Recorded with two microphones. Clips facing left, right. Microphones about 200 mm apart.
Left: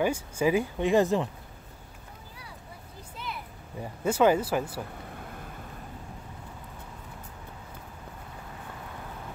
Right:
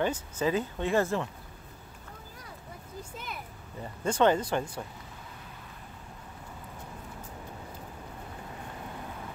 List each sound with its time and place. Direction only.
0.0 s speech: 10° left (ahead or behind)
3.8 s speech: 5° left (ahead or behind)
5.0 s a sound: 55° left (ahead or behind)